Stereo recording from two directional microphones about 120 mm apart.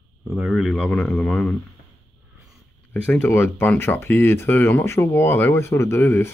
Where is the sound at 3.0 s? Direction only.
15° left (ahead or behind).